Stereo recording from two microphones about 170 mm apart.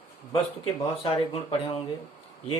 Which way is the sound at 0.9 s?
35° left (ahead or behind).